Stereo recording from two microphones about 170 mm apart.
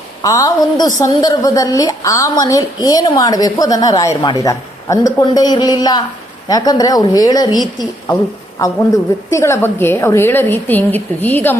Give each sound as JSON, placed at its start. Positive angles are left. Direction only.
{"t": 0.2, "sound": "a woman's voice", "side_deg": 20}